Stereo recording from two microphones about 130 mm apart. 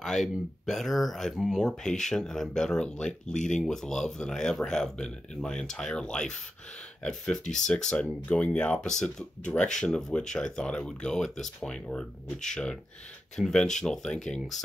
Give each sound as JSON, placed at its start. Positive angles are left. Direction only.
{"t": 0.0, "sound": "speech", "side_deg": 0}